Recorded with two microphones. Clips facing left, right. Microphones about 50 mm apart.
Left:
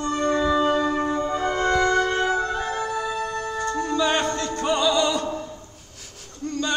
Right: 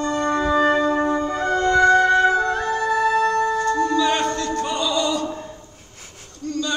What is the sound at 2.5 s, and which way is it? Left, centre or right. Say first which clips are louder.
Music: right 5 dB; right.